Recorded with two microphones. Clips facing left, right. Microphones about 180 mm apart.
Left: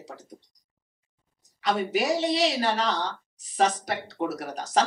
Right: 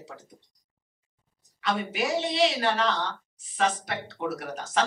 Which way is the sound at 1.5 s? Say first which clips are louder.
Left 3 dB; 35° left (ahead or behind).